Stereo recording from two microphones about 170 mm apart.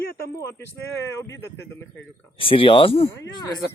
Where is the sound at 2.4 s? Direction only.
30° left (ahead or behind).